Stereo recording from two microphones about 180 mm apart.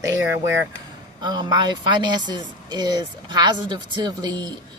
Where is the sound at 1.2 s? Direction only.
25° right (ahead or behind).